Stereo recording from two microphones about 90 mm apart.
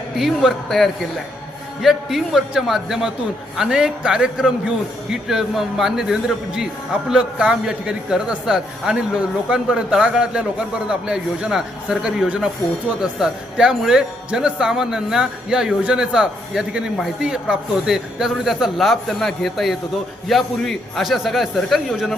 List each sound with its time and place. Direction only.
0.2 s a man's voice: centre (ahead or behind)